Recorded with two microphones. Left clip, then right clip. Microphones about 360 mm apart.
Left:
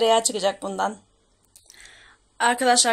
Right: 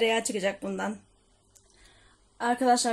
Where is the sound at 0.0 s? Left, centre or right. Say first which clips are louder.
Left 6 dB; left.